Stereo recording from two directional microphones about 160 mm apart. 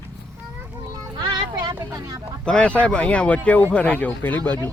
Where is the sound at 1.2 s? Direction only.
25° right (ahead or behind).